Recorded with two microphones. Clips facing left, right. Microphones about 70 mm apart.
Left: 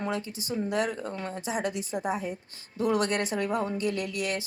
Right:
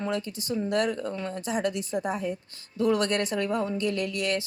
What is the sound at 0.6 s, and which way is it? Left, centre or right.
Speech, centre.